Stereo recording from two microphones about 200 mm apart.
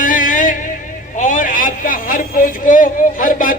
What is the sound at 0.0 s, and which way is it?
Music, 40° left (ahead or behind).